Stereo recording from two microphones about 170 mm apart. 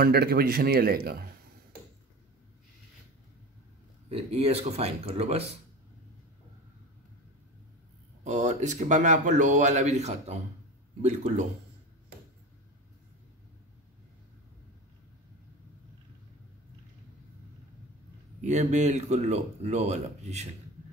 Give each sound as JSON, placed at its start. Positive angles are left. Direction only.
{"t": 0.0, "sound": "speech", "side_deg": -65}
{"t": 4.1, "sound": "speech", "side_deg": -35}
{"t": 8.2, "sound": "speech", "side_deg": -45}
{"t": 18.4, "sound": "speech", "side_deg": -45}